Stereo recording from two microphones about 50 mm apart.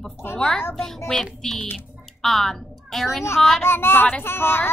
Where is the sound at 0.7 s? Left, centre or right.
Centre.